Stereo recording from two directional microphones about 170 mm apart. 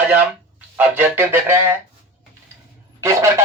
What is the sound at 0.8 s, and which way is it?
Speech, 10° right (ahead or behind).